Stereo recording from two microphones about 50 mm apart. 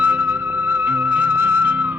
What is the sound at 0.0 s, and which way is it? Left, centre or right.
Music, right.